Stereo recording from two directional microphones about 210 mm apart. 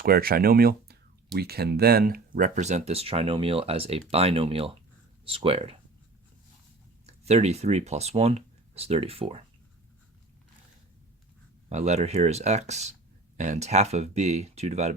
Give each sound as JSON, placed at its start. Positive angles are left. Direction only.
{"t": 0.0, "sound": "speech", "side_deg": -45}
{"t": 7.1, "sound": "speech", "side_deg": -30}
{"t": 11.7, "sound": "speech", "side_deg": -35}